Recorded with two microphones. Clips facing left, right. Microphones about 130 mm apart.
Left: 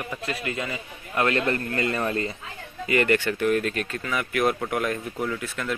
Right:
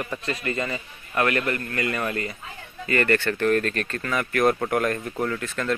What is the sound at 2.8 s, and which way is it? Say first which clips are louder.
Speech: even; 15° left (ahead or behind).